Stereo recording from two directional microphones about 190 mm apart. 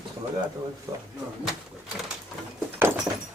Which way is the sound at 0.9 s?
20° right (ahead or behind).